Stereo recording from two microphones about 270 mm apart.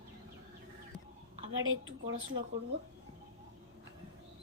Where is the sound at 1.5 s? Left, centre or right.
Right.